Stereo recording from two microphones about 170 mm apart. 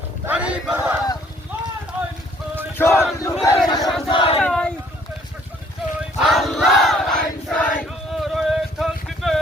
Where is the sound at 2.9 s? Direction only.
Centre (ahead or behind).